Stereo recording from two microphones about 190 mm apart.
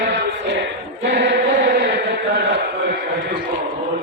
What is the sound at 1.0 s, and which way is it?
Chant, 65° right (ahead or behind).